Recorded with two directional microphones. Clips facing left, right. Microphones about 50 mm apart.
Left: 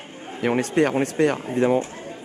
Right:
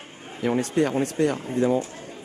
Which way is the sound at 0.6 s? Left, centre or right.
Left.